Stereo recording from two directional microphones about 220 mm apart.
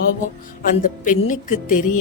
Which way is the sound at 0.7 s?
35° left (ahead or behind).